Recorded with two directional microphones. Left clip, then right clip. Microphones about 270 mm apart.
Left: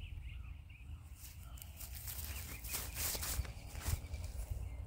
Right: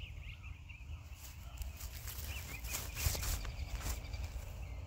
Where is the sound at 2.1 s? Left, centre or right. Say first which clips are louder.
Right 3 dB; centre.